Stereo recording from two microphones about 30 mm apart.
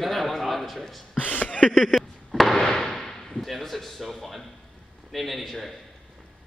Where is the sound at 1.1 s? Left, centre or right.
Left.